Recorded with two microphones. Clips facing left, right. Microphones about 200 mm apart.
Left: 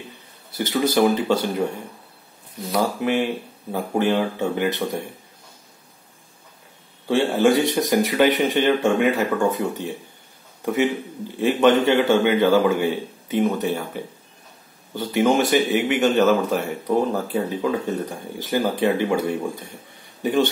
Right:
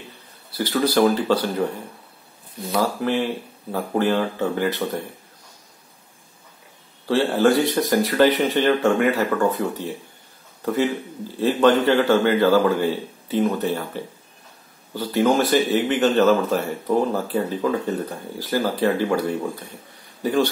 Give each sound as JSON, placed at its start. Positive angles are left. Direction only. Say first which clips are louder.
{"t": 0.6, "sound": "speech", "louder": "even", "side_deg": 20}
{"t": 2.8, "sound": "speech", "louder": "left 1 dB", "side_deg": 15}
{"t": 7.1, "sound": "a man's voice", "louder": "even", "side_deg": 15}
{"t": 20.2, "sound": "a man's voice", "louder": "even", "side_deg": 20}